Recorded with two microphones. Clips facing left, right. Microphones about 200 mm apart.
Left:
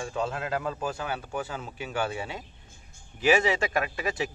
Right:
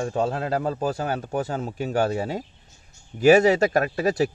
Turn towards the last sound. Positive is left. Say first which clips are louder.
# right 8 dB
turn(degrees=-40)  # may be behind; listen again after turning